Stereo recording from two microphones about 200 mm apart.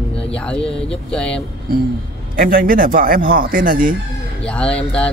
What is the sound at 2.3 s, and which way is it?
A man's voice, 45° right (ahead or behind).